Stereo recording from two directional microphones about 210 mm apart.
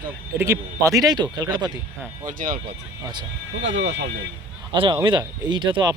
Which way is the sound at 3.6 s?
60° right (ahead or behind).